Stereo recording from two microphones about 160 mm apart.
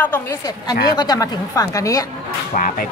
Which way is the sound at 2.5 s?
55° left (ahead or behind).